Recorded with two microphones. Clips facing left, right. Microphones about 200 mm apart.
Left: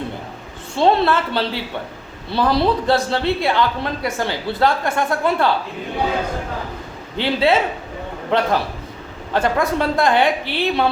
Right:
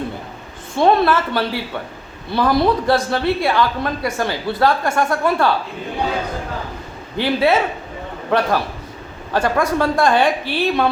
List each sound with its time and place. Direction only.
0.8 s speech: 25° left (ahead or behind)
7.2 s speech: 25° left (ahead or behind)